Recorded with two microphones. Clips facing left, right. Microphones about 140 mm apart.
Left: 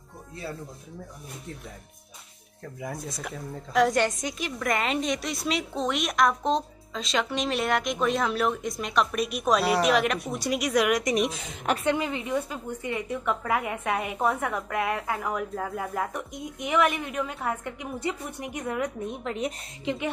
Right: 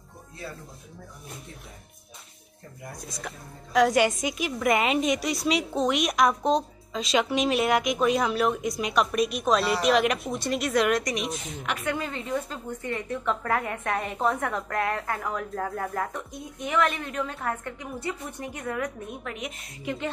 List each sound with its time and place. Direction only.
3.2 s a woman's voice: centre (ahead or behind); by 19.9 s 30° left (ahead or behind)